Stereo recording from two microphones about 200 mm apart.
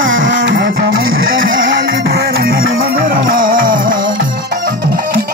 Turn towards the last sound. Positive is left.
turn(degrees=-45)  # may be behind; listen again after turning